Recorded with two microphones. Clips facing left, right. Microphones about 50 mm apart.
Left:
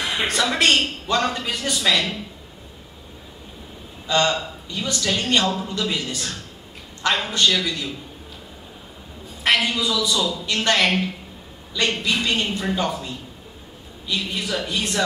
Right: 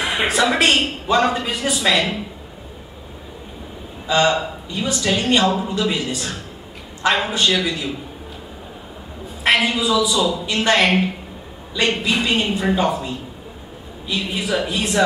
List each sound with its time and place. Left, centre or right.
0.0 s a man's voice: centre
4.1 s a man's voice: centre
9.4 s a man's voice: centre